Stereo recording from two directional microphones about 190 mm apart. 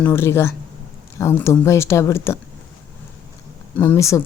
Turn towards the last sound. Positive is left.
turn(degrees=15)  # may be behind; listen again after turning